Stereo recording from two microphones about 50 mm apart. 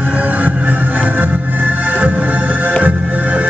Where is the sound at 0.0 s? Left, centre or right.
Right.